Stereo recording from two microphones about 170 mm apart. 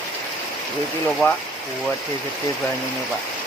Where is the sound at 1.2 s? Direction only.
15° left (ahead or behind).